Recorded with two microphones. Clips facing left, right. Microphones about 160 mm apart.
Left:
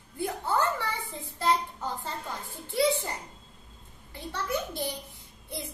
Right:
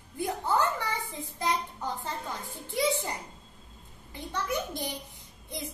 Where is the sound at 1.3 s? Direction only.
15° right (ahead or behind).